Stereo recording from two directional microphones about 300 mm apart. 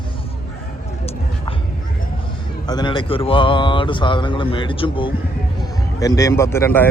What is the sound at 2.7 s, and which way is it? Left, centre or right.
A man's voice, centre.